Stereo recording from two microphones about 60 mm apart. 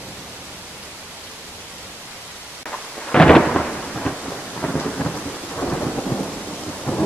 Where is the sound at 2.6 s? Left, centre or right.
Centre.